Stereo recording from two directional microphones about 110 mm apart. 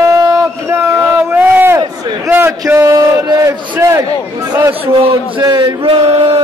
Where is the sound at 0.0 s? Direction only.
30° right (ahead or behind).